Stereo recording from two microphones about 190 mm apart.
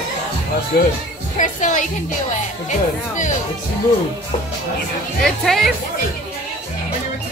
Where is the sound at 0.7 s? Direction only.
50° left (ahead or behind).